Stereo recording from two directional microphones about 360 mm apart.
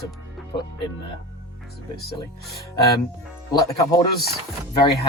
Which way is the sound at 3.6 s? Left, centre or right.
Centre.